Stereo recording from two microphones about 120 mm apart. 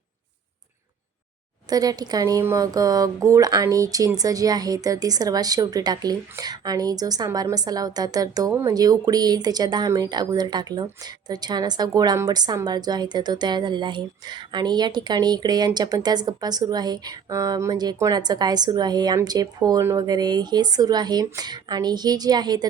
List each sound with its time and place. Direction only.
1.7 s speech: 30° right (ahead or behind)